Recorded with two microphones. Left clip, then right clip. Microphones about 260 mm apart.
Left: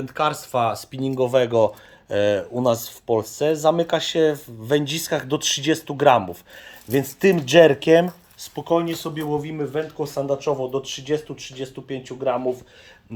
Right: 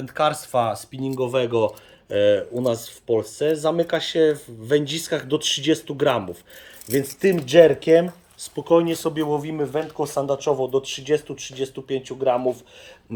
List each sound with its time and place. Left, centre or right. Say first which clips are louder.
0.0 s speech: right 1 dB; centre
1.0 s speech: left 3 dB; centre
8.4 s speech: right 2 dB; centre
8.7 s speech: right 4 dB; centre; by 12.5 s right